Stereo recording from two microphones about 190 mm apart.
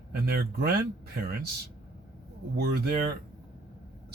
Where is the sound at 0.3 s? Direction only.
55° right (ahead or behind).